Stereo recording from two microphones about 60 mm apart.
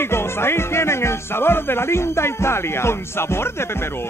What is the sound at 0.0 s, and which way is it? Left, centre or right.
Music, left.